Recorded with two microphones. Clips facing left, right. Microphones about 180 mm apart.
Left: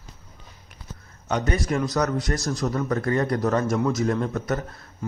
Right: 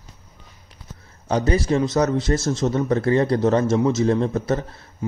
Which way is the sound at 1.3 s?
30° right (ahead or behind).